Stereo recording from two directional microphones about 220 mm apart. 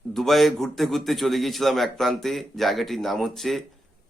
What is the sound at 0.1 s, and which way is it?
A man's voice, centre (ahead or behind).